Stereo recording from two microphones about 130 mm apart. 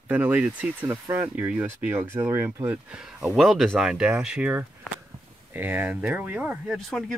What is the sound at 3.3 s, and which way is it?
Speech, centre (ahead or behind).